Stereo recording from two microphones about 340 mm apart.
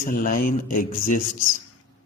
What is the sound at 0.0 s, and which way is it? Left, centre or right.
A man's voice, left.